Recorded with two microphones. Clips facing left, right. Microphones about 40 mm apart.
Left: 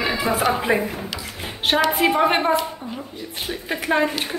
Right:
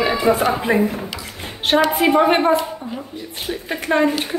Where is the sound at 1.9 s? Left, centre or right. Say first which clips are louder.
Right 3 dB; centre.